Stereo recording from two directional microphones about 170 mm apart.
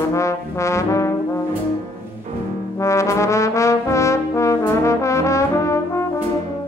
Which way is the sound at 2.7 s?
15° left (ahead or behind).